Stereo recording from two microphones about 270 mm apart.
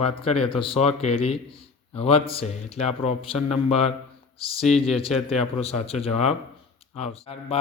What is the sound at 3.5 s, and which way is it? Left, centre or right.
Speech, centre.